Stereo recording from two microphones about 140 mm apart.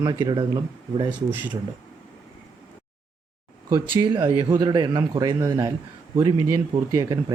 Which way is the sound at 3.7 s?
30° right (ahead or behind).